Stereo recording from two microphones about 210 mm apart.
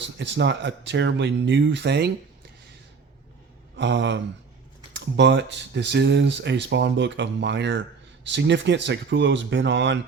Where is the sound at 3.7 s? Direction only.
55° right (ahead or behind).